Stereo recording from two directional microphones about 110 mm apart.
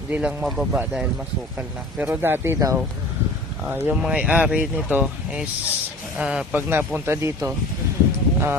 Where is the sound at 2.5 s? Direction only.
30° right (ahead or behind).